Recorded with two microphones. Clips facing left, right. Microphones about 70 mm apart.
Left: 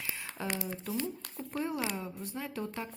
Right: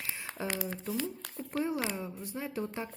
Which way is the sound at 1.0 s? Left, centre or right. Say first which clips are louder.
Even; left.